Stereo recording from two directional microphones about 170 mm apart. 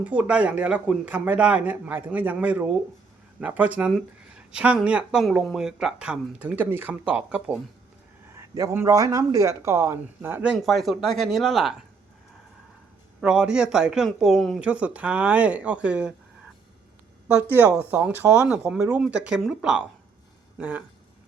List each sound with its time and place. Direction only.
0.0 s speech: 10° right (ahead or behind)
8.4 s speech: 20° right (ahead or behind); by 11.8 s centre (ahead or behind)
13.2 s speech: 5° right (ahead or behind)
17.5 s speech: 10° right (ahead or behind)